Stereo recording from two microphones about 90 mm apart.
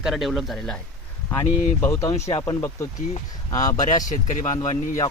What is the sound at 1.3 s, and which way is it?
Speech, 30° left (ahead or behind).